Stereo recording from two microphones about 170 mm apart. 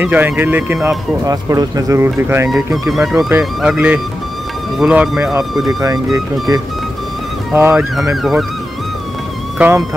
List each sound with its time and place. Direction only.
0.0 s speech: 10° right (ahead or behind)
2.9 s speech: centre (ahead or behind)
5.7 s speech: 20° right (ahead or behind)
7.5 s speech: 15° right (ahead or behind)
7.9 s speech: centre (ahead or behind)
9.6 s speech: 10° right (ahead or behind)